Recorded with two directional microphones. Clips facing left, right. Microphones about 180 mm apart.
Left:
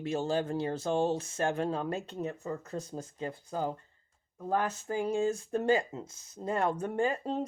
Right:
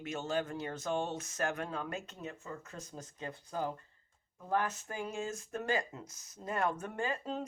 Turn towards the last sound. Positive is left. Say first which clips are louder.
# left 6 dB
turn(degrees=30)  # may be behind; listen again after turning